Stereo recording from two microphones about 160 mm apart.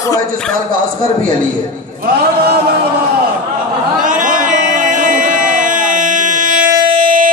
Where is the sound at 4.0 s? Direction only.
55° right (ahead or behind).